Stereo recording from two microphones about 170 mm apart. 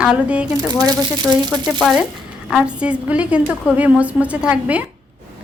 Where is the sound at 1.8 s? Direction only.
Centre (ahead or behind).